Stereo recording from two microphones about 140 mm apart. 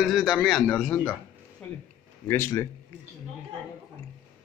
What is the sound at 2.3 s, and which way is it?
Speech, 20° left (ahead or behind).